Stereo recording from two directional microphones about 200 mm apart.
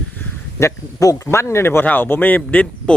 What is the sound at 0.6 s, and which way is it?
Speech, 15° left (ahead or behind).